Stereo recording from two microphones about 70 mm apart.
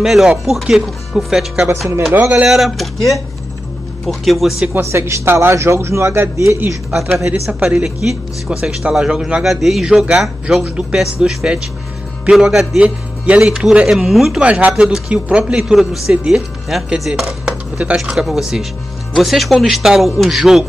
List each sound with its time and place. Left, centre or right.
0.0 s speech: centre
2.1 s speech: right
2.4 s speech: centre
4.0 s speech: centre
4.7 s speech: right
7.0 s speech: centre
14.4 s speech: centre
17.1 s chopping: centre
18.1 s speech: centre